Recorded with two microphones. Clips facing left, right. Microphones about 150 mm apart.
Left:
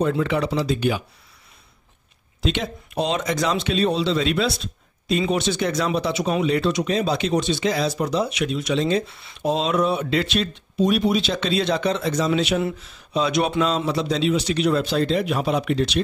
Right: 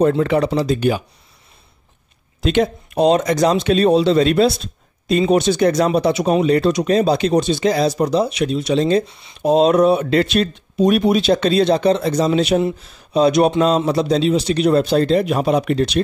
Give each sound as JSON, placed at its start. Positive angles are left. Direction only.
{"t": 0.1, "sound": "speech", "side_deg": -45}
{"t": 2.4, "sound": "speech", "side_deg": -50}
{"t": 9.0, "sound": "speech", "side_deg": -20}
{"t": 9.4, "sound": "speech", "side_deg": -45}